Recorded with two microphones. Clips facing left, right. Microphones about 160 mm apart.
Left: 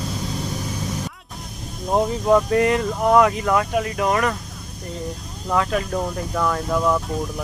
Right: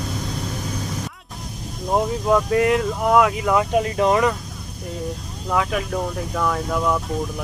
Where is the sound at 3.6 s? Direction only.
25° right (ahead or behind).